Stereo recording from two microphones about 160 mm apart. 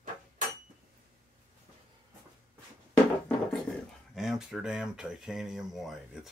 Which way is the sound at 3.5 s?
Centre (ahead or behind).